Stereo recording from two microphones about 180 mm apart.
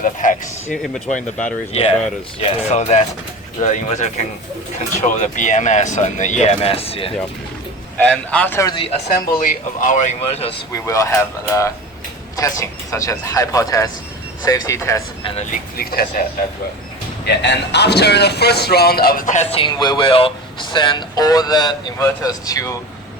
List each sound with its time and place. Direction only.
0.0 s speech: 45° left (ahead or behind)
0.8 s speech: centre (ahead or behind)
1.7 s speech: 35° left (ahead or behind)
7.9 s speech: 5° left (ahead or behind)
8.6 s a man's voice: 30° left (ahead or behind)
9.0 s speech: 50° left (ahead or behind)
10.7 s a man's voice: 15° left (ahead or behind)
15.8 s speech: 55° left (ahead or behind)
17.2 s a man's voice: 70° left (ahead or behind); by 22.7 s 20° left (ahead or behind)